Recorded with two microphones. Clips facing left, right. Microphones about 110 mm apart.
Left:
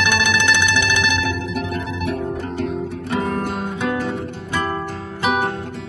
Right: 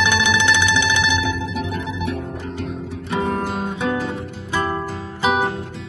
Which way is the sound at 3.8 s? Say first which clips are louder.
Even; centre (ahead or behind).